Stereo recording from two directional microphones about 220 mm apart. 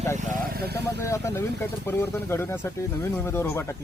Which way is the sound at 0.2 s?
45° right (ahead or behind).